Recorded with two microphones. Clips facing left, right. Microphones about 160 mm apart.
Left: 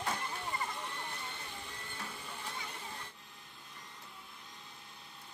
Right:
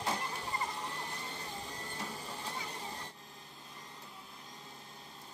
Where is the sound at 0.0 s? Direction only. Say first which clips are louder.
Right 1 dB; 30° right (ahead or behind).